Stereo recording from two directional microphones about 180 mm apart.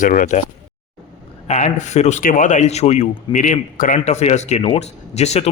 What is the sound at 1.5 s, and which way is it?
A man's voice, 40° left (ahead or behind).